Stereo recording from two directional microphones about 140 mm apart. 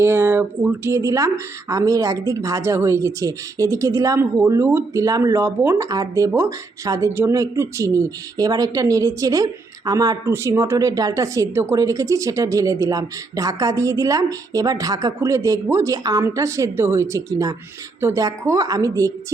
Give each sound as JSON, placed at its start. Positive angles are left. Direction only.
{"t": 0.0, "sound": "a woman's voice", "side_deg": -15}